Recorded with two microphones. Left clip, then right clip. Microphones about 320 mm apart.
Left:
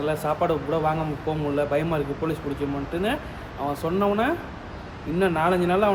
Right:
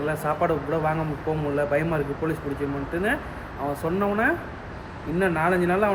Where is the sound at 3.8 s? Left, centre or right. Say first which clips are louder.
Left 1 dB; centre.